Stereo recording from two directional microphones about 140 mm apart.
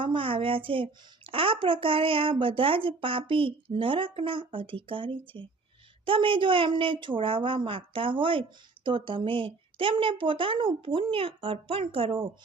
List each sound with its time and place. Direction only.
0.0 s a woman's voice: 40° right (ahead or behind)